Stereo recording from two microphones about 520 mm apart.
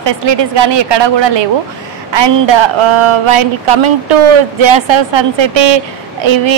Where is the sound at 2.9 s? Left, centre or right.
Right.